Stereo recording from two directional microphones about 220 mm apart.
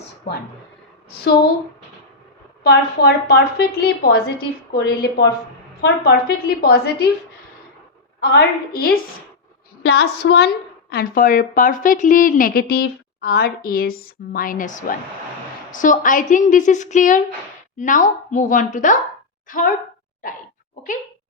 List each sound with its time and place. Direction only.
2.6 s a woman's voice: 45° left (ahead or behind)
8.2 s a woman's voice: 45° left (ahead or behind)